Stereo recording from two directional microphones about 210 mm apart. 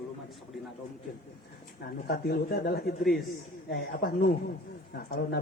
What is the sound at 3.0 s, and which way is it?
Speech, centre (ahead or behind).